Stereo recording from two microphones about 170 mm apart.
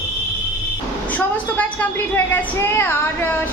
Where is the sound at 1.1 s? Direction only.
10° left (ahead or behind).